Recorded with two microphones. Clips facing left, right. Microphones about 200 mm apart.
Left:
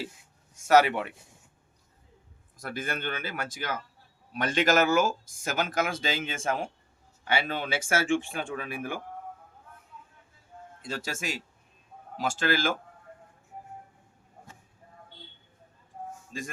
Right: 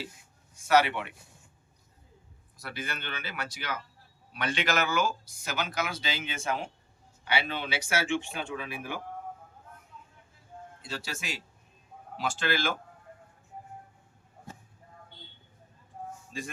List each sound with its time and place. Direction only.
0.5 s a man's voice: 45° left (ahead or behind)
2.6 s speech: 50° left (ahead or behind)
10.8 s speech: 50° left (ahead or behind)
16.3 s speech: 45° left (ahead or behind)